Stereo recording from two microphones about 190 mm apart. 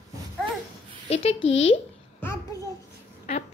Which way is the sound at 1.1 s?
35° left (ahead or behind).